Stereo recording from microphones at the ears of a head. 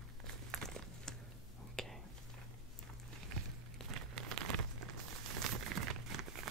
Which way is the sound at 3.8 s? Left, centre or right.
Right.